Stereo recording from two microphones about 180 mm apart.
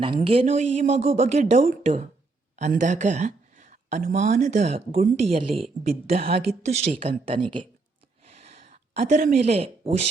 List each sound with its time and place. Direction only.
0.0 s a woman's voice: 30° right (ahead or behind); by 5.2 s 50° right (ahead or behind)
5.2 s speech: 35° right (ahead or behind)
8.3 s a sound: 35° right (ahead or behind)